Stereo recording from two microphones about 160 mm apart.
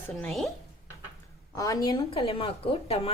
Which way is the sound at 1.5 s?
20° left (ahead or behind).